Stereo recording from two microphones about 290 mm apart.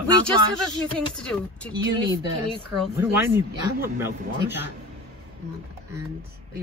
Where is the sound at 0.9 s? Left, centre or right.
Centre.